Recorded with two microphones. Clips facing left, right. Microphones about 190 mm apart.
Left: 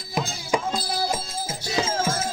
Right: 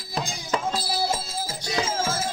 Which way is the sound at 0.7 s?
10° right (ahead or behind).